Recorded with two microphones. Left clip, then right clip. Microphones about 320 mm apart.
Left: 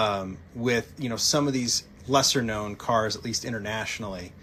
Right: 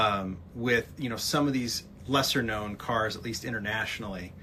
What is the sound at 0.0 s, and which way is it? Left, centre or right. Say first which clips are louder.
Speech: left 1 dB; centre.